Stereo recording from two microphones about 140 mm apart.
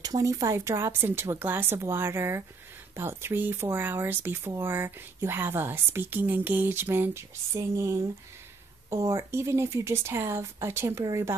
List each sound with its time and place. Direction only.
0.0 s a woman's voice: 25° right (ahead or behind)